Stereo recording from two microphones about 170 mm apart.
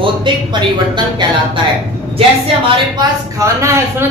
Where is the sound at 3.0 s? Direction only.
20° right (ahead or behind).